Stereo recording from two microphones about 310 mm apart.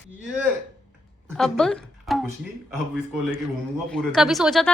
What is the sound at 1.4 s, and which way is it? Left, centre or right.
Speech, centre.